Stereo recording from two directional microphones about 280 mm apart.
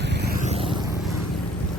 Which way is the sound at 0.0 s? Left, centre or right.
Right.